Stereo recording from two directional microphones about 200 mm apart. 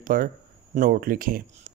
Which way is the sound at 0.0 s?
45° right (ahead or behind).